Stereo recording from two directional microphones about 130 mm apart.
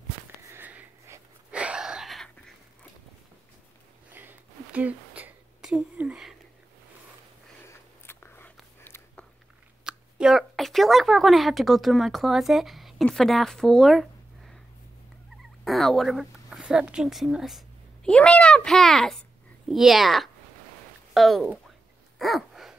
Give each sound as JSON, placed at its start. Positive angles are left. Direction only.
{"t": 0.5, "sound": "sniff", "side_deg": -15}
{"t": 1.5, "sound": "wheeze", "side_deg": -10}
{"t": 4.1, "sound": "a sound", "side_deg": -15}
{"t": 7.6, "sound": "biting", "side_deg": 20}
{"t": 9.8, "sound": "speech", "side_deg": -5}
{"t": 15.6, "sound": "a child's voice", "side_deg": 0}
{"t": 22.2, "sound": "dog", "side_deg": 0}